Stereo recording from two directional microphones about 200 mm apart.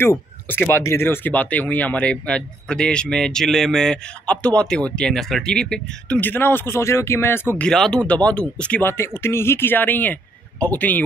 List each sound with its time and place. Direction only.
0.0 s speech: 10° left (ahead or behind)